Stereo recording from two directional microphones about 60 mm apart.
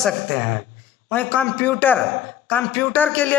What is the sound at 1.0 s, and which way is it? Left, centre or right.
A man's voice, left.